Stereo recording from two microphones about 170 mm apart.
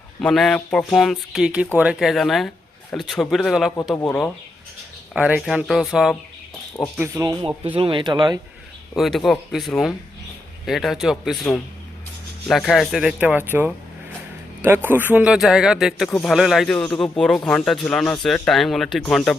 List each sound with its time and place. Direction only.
0.2 s speech: centre (ahead or behind)
7.0 s speech: 15° right (ahead or behind)
7.8 s speech: 30° right (ahead or behind)
9.0 s speech: centre (ahead or behind)